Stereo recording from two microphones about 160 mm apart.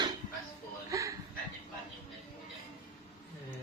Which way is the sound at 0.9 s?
20° right (ahead or behind).